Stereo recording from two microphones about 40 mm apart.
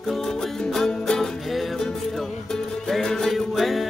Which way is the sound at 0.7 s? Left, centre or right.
Centre.